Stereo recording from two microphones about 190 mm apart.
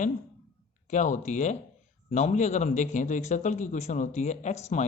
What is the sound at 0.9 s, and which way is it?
A man's voice, 40° left (ahead or behind).